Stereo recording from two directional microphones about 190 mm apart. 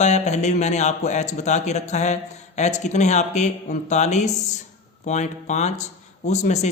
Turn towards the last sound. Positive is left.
turn(degrees=35)  # may be behind; listen again after turning